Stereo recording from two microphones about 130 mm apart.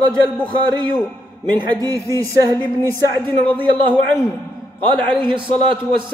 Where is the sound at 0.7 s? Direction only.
35° right (ahead or behind).